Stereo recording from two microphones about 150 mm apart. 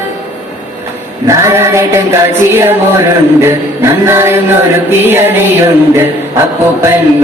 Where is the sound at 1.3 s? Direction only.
20° right (ahead or behind).